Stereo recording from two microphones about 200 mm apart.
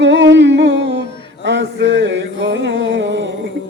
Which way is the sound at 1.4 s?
65° right (ahead or behind).